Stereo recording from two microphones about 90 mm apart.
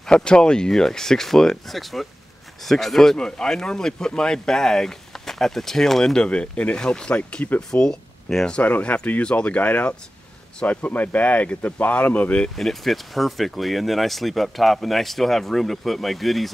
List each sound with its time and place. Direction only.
0.0 s speech: 10° left (ahead or behind)
12.5 s speech: centre (ahead or behind)